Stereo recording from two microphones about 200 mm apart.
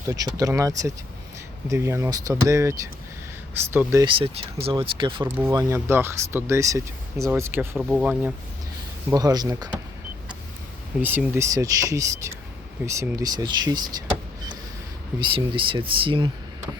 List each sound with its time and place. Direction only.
0.1 s speech: 20° right (ahead or behind)
4.0 s speech: 30° right (ahead or behind)
5.2 s speech: 15° right (ahead or behind)
7.8 s speech: centre (ahead or behind)
9.0 s speech: 20° right (ahead or behind)
11.0 s speech: 10° right (ahead or behind)
15.2 s speech: 25° right (ahead or behind)